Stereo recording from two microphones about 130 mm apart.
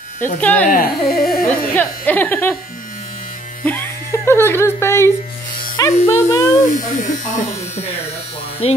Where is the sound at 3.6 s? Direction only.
15° left (ahead or behind).